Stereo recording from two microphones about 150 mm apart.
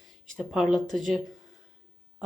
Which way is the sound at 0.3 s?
Centre (ahead or behind).